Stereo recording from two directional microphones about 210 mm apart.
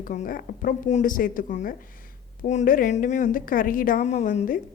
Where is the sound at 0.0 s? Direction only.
40° left (ahead or behind).